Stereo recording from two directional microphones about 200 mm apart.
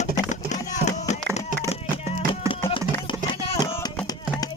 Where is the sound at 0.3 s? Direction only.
35° left (ahead or behind).